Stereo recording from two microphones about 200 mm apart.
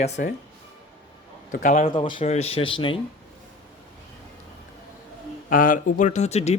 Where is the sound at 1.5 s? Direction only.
40° left (ahead or behind).